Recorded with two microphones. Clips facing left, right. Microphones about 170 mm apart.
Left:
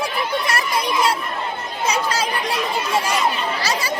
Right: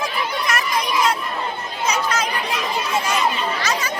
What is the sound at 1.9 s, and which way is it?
Speech, 30° left (ahead or behind).